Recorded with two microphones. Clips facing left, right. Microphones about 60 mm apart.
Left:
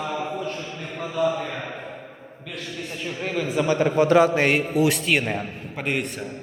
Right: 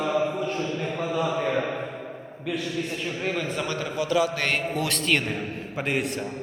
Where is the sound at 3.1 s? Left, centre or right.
Centre.